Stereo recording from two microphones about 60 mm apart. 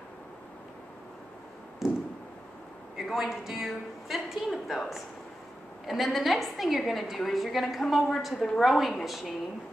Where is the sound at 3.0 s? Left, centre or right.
Centre.